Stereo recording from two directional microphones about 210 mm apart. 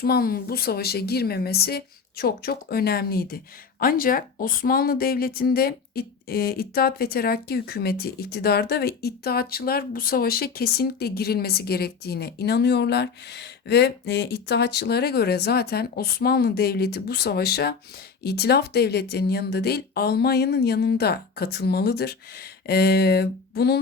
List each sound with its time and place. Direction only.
0.0 s a woman's voice: 45° left (ahead or behind)